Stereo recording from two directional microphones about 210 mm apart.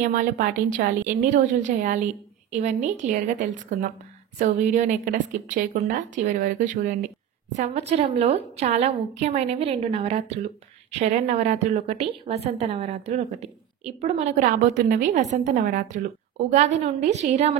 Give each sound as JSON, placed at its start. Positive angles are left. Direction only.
{"t": 0.0, "sound": "a woman's voice", "side_deg": -40}